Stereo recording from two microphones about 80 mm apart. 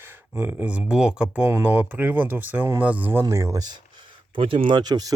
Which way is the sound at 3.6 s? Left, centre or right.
Right.